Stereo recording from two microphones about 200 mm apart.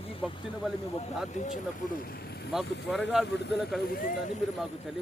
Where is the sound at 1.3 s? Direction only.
35° left (ahead or behind); by 3.5 s 60° left (ahead or behind).